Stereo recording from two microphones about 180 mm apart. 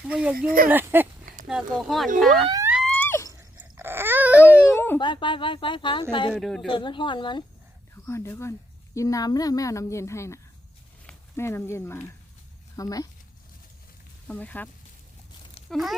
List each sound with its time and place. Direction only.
0.0 s speech: 5° right (ahead or behind)
2.8 s wail: 10° left (ahead or behind)
3.6 s a sound: 15° right (ahead or behind)
4.4 s a sound: 10° left (ahead or behind)
4.9 s a woman's voice: 25° left (ahead or behind)
6.3 s speech: centre (ahead or behind)
6.7 s a woman's voice: 25° left (ahead or behind)
8.0 s a woman's voice: 15° left (ahead or behind)
14.3 s a woman's voice: 10° left (ahead or behind)
15.7 s speech: centre (ahead or behind)